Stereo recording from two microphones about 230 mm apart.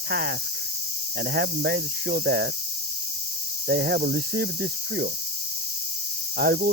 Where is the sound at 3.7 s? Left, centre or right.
Right.